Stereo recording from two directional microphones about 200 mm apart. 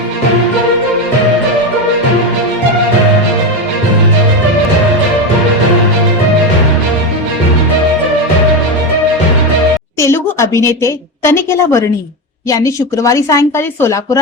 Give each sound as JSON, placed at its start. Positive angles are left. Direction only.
{"t": 10.0, "sound": "a woman's voice", "side_deg": 15}